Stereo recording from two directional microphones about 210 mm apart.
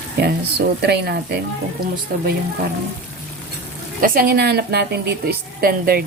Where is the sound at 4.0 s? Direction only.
45° right (ahead or behind).